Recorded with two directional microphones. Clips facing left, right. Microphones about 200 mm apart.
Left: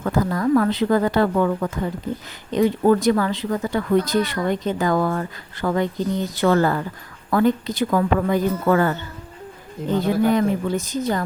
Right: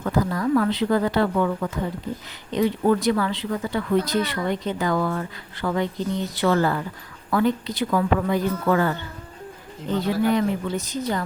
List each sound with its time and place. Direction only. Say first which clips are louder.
0.0 s speech: left 2 dB; 45° left (ahead or behind)
10.0 s speech: left 2 dB; 50° left (ahead or behind)